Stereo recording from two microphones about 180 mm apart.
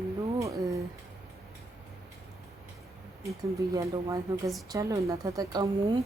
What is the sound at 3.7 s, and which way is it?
Speech, 20° right (ahead or behind).